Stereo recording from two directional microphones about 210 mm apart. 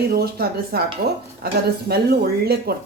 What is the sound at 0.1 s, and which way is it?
Speech, 45° right (ahead or behind).